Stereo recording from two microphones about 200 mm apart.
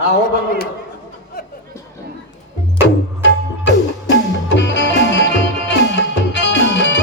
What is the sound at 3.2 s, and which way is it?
Music, 60° left (ahead or behind).